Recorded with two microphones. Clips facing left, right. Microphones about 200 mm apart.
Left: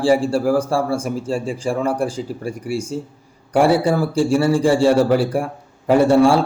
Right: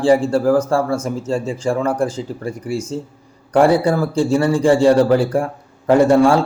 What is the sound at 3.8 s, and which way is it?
Speech, 15° left (ahead or behind).